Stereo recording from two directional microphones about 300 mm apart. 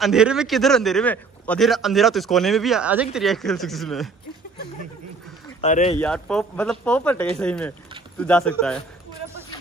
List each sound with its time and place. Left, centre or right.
0.0 s a man's voice: centre
5.6 s speech: left
5.9 s a man's voice: centre